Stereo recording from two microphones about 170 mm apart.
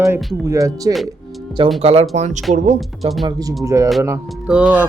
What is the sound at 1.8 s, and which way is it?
Speech, 40° right (ahead or behind).